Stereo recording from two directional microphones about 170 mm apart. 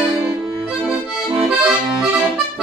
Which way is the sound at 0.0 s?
5° right (ahead or behind).